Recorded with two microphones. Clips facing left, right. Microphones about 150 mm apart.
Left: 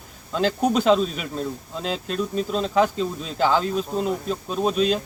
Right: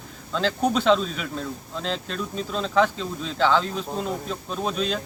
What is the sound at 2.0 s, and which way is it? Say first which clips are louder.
Speech: left 5 dB; 40° left (ahead or behind).